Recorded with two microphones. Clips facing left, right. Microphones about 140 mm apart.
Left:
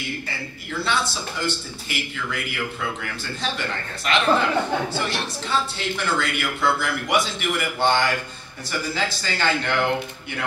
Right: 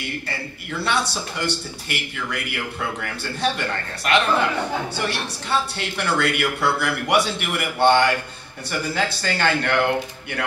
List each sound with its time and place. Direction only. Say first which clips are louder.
0.8 s speech: right 2 dB; 65° right (ahead or behind)